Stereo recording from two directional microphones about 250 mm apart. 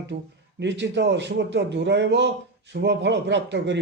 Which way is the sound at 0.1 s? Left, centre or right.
Right.